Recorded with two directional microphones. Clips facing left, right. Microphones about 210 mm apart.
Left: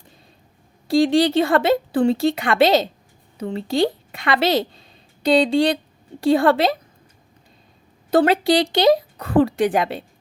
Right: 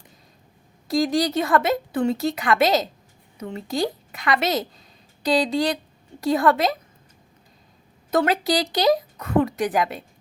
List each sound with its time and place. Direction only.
0.9 s a woman's voice: 30° left (ahead or behind)
8.1 s speech: 30° left (ahead or behind)